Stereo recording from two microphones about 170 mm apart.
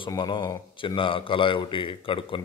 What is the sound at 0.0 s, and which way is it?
A man's voice, 30° left (ahead or behind).